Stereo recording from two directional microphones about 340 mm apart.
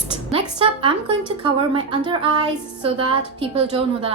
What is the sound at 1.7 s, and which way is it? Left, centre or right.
A woman's voice, centre.